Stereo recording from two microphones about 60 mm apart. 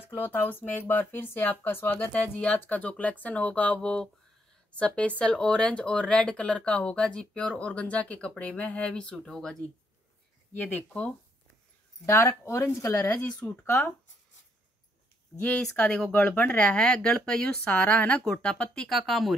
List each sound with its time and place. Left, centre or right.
0.1 s speech: left; by 9.1 s centre
9.1 s speech: centre
10.7 s speech: left
12.1 s speech: left
13.4 s speech: left
15.8 s speech: centre
16.1 s speech: left
17.6 s speech: left
18.9 s speech: centre